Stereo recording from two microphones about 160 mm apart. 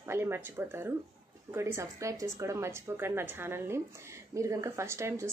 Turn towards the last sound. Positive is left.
turn(degrees=-15)  # may be behind; listen again after turning